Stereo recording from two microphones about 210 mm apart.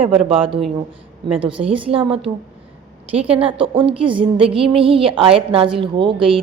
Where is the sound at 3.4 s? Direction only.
25° right (ahead or behind).